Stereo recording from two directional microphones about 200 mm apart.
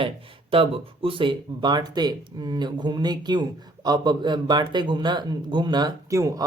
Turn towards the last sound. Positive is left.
turn(degrees=-20)  # may be behind; listen again after turning